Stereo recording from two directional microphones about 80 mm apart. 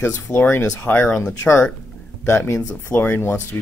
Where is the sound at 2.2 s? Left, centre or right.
Left.